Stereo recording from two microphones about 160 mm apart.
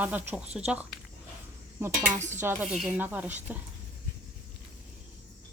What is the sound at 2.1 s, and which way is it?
Dishes, 50° right (ahead or behind).